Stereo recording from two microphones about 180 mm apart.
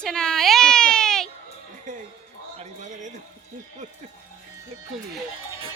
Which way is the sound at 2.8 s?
40° right (ahead or behind).